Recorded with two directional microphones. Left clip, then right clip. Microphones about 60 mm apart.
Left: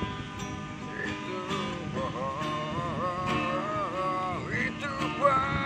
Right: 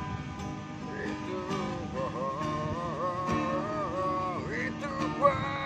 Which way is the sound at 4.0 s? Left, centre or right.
Right.